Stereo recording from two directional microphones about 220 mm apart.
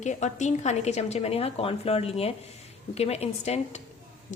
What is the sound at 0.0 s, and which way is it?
A woman's voice, 35° left (ahead or behind).